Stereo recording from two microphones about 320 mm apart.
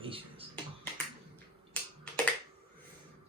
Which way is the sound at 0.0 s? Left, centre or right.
Centre.